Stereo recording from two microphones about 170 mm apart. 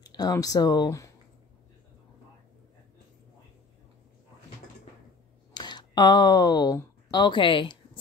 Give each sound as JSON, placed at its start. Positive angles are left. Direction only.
{"t": 0.0, "sound": "speech", "side_deg": 20}
{"t": 5.5, "sound": "speech", "side_deg": 25}